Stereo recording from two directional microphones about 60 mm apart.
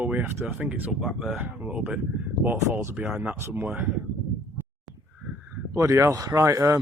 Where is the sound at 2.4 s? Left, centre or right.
Right.